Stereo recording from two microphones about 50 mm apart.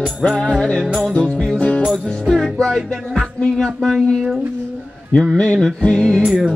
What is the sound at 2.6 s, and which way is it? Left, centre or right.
Music, centre.